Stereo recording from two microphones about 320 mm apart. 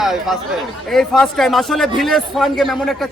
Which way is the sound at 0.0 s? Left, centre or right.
Centre.